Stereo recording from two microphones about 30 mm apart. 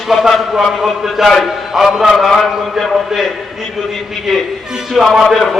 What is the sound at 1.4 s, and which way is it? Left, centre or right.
Speech, centre.